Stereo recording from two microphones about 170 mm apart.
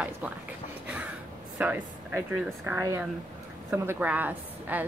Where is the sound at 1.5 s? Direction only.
10° right (ahead or behind).